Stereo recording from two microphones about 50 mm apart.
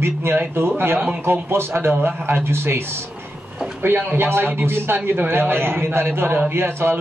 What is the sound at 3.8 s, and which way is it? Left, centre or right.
A man's voice, right.